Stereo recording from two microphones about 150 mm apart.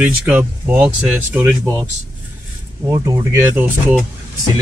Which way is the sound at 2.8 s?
25° right (ahead or behind).